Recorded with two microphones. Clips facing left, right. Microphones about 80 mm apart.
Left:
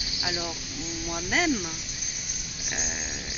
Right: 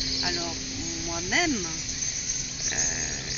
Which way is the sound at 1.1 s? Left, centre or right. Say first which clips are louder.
Left 1 dB; centre.